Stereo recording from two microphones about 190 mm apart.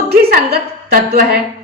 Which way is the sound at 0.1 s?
55° right (ahead or behind).